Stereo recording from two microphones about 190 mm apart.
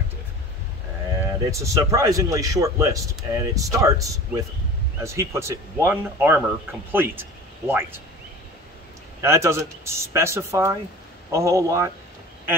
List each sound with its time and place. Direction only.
1.5 s a man's voice: 15° right (ahead or behind)
9.2 s a man's voice: 15° right (ahead or behind)